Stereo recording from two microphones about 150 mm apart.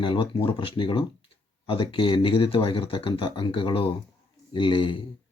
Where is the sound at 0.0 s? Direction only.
35° left (ahead or behind).